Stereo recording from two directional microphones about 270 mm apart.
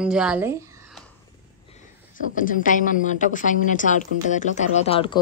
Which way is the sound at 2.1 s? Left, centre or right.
Left.